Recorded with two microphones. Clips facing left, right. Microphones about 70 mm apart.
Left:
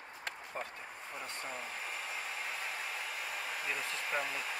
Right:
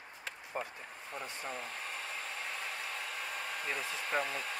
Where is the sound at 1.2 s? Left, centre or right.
Centre.